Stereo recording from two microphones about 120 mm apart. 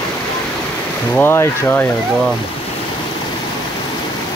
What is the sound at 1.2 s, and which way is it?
Speech, 20° left (ahead or behind).